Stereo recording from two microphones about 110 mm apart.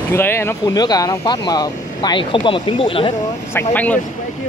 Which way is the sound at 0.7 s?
35° left (ahead or behind).